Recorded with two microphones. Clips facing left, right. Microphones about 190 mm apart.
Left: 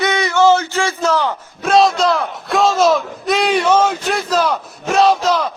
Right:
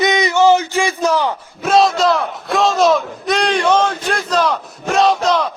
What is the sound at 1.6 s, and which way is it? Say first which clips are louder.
Speech: even; centre (ahead or behind).